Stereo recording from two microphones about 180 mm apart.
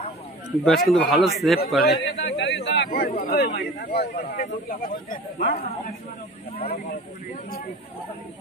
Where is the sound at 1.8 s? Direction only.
65° left (ahead or behind).